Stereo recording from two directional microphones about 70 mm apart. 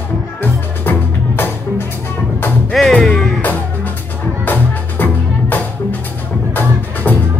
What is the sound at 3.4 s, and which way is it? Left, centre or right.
Music, left.